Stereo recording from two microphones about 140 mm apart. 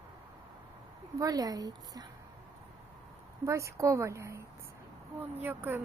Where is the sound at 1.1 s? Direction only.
25° right (ahead or behind).